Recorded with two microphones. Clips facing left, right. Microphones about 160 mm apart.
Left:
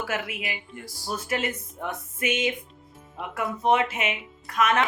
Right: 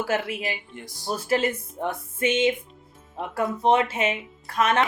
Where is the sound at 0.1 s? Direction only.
30° right (ahead or behind).